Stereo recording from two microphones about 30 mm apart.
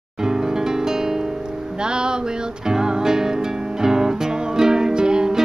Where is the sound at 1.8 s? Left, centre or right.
Right.